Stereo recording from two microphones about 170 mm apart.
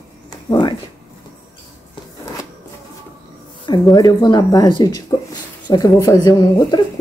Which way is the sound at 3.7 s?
25° left (ahead or behind).